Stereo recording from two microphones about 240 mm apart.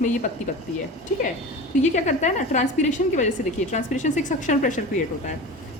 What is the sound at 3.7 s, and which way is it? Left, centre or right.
A woman's voice, left.